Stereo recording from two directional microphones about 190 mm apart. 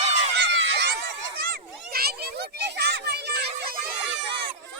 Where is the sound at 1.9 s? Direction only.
55° right (ahead or behind).